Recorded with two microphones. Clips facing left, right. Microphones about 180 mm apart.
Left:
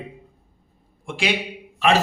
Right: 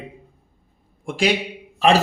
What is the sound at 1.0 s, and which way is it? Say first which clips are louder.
Speech: right 5 dB; 40° right (ahead or behind).